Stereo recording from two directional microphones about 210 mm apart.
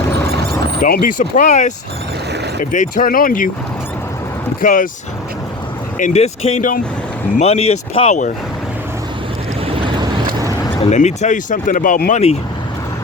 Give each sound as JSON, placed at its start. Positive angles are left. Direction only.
{"t": 0.8, "sound": "speech", "side_deg": 45}
{"t": 4.6, "sound": "speech", "side_deg": 40}
{"t": 6.0, "sound": "speech", "side_deg": 30}
{"t": 9.7, "sound": "vehicle", "side_deg": -25}
{"t": 10.8, "sound": "speech", "side_deg": 35}